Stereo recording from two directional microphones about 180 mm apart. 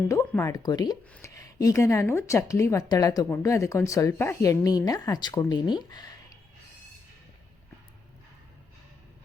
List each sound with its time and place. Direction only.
0.1 s a woman's voice: 15° left (ahead or behind)